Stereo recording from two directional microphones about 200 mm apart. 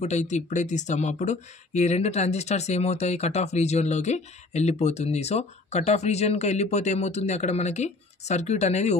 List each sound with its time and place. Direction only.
0.0 s speech: 35° left (ahead or behind)